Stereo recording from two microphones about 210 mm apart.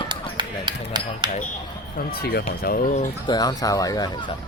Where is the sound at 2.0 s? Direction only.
50° left (ahead or behind).